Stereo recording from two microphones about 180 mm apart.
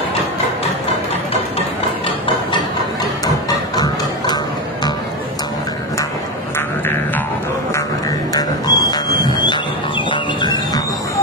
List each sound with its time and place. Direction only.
3.4 s music: 20° left (ahead or behind)
8.3 s music: 20° left (ahead or behind)
10.4 s music: 25° left (ahead or behind)